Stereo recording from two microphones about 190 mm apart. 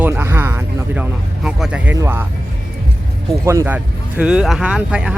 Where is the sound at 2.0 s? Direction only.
10° right (ahead or behind).